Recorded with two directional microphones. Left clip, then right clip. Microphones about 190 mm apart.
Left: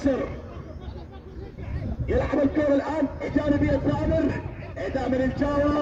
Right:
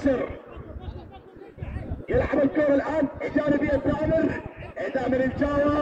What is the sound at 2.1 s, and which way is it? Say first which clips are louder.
A man's voice: right 1 dB; 25° left (ahead or behind).